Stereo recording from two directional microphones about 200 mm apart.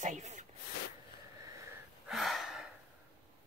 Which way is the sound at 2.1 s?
Centre (ahead or behind).